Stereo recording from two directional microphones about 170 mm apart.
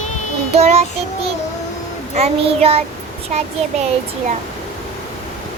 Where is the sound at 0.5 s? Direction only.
40° right (ahead or behind).